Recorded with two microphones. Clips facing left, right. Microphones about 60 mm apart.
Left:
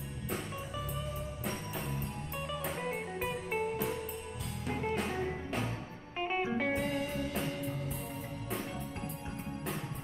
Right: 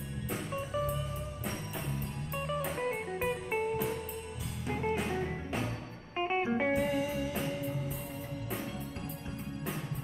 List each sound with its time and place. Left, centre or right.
0.3 s music: centre
6.1 s music: centre
6.7 s music: centre